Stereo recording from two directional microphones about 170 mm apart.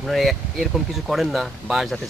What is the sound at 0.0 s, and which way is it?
Speech, centre (ahead or behind).